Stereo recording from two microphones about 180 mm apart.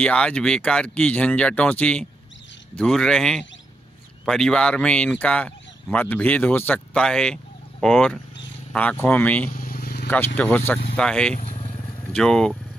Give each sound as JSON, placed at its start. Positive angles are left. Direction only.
{"t": 0.0, "sound": "speech", "side_deg": 5}
{"t": 9.5, "sound": "vehicle", "side_deg": 50}
{"t": 10.3, "sound": "speech", "side_deg": 10}
{"t": 11.3, "sound": "motorcycle", "side_deg": 35}
{"t": 12.1, "sound": "speech", "side_deg": 5}